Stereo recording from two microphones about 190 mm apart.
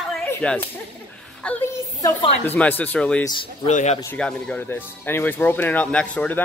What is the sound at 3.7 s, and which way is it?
Speech, 40° left (ahead or behind).